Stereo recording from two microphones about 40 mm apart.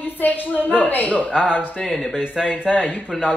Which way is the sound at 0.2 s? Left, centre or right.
Left.